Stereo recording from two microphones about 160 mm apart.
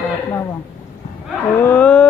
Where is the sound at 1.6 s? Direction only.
10° left (ahead or behind).